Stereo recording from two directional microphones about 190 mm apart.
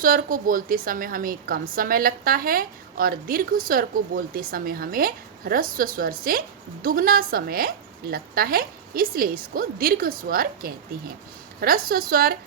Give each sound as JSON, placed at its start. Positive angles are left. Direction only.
{"t": 0.0, "sound": "a woman's voice", "side_deg": -50}